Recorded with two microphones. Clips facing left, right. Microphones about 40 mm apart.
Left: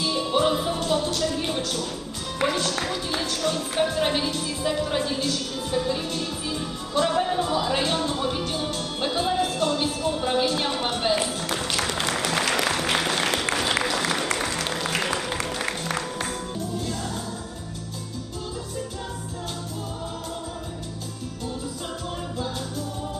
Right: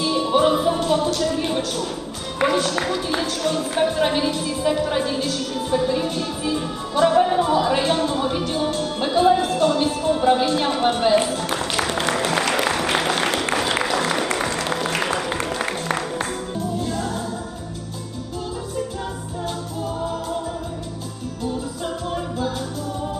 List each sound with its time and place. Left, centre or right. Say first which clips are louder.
0.0 s music: right 5 dB; centre
2.4 s speech: right 5 dB; centre
11.5 s music: right 2 dB; centre
12.6 s a sound: right 3 dB; centre
12.9 s music: right 3 dB; centre
13.1 s applause: right 3 dB; centre
13.8 s music: right 4 dB; centre